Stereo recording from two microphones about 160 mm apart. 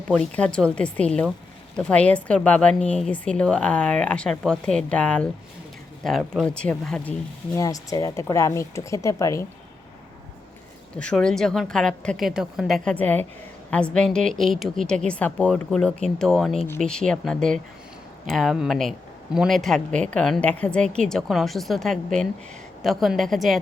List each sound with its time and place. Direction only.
0.1 s a woman's voice: 5° left (ahead or behind)
7.5 s speech: 20° left (ahead or behind)
10.9 s a woman's voice: 5° left (ahead or behind)